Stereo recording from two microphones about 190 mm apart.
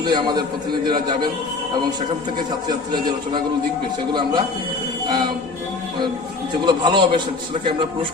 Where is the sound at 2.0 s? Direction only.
25° right (ahead or behind).